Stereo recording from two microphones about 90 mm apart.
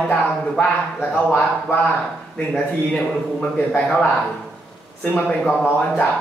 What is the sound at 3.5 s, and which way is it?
Speech, 15° left (ahead or behind).